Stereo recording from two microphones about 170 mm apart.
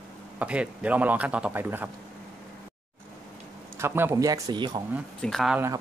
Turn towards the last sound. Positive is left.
turn(degrees=0)  # may be behind; listen again after turning